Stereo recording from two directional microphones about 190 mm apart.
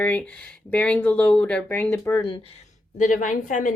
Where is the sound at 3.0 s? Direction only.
40° left (ahead or behind).